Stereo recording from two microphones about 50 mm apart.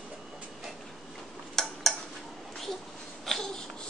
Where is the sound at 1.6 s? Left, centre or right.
Centre.